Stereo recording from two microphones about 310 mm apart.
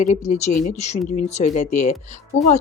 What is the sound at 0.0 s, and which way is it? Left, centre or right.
Speech, left.